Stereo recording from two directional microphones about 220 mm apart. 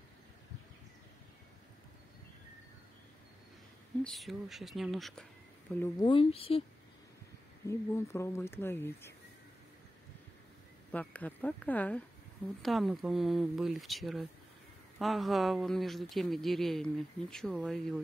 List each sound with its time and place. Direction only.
4.0 s speech: centre (ahead or behind)
5.8 s speech: 20° left (ahead or behind)
7.6 s speech: 10° left (ahead or behind)
10.9 s speech: 5° left (ahead or behind)